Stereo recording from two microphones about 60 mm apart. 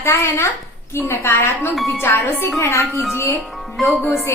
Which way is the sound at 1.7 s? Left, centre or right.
Centre.